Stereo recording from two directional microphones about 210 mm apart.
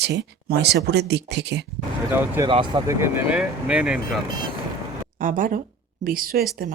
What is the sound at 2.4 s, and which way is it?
Speech, 25° right (ahead or behind).